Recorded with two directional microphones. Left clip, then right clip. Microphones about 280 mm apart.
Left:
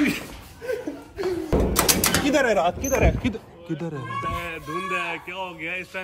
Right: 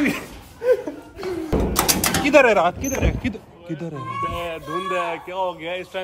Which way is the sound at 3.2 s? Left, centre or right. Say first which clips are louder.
Even; centre.